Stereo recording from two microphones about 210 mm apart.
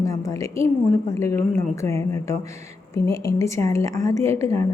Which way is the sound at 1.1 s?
15° left (ahead or behind).